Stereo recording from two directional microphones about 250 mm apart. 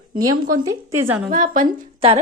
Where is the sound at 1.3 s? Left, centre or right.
Right.